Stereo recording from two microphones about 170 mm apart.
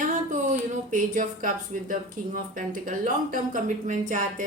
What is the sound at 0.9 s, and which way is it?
Speech, 50° right (ahead or behind).